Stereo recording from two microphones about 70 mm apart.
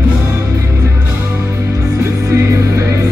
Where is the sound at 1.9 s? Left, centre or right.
Right.